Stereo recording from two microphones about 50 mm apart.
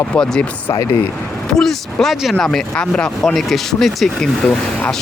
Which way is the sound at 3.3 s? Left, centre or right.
Centre.